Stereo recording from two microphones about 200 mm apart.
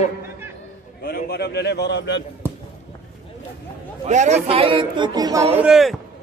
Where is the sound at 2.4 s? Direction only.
10° right (ahead or behind).